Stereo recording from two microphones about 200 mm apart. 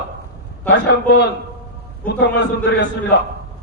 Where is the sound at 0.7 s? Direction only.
55° left (ahead or behind).